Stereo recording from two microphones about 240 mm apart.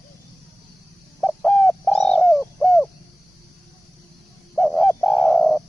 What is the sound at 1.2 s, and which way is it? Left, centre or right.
Bird, centre.